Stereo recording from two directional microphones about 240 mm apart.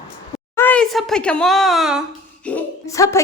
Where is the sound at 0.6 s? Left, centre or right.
Centre.